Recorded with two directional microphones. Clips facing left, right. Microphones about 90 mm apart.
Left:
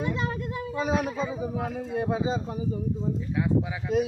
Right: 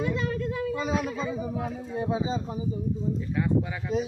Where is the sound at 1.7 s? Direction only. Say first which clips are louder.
Left 2 dB; 70° left (ahead or behind).